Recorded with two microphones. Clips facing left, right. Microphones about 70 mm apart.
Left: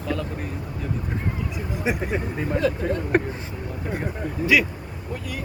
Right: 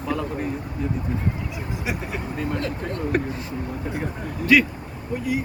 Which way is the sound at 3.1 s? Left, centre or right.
Left.